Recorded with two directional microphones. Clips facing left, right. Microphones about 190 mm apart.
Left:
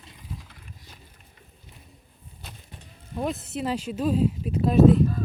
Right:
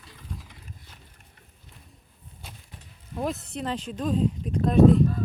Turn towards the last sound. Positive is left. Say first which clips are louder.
# even
turn(degrees=5)  # may be behind; listen again after turning